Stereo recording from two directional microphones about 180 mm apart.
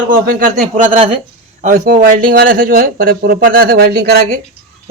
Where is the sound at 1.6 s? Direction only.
55° right (ahead or behind).